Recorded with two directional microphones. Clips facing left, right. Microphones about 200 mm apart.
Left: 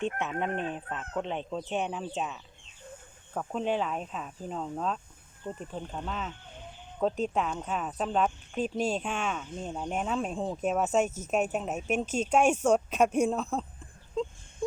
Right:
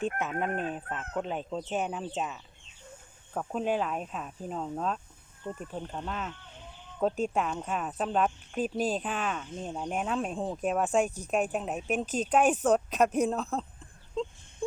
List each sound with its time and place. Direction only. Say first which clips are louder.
0.0 s speech: even; 5° right (ahead or behind)
12.0 s speech: left 1 dB; 35° right (ahead or behind)
12.3 s speech: even; 5° right (ahead or behind)